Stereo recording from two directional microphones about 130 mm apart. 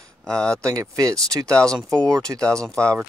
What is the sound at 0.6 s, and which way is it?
Speech, 25° right (ahead or behind).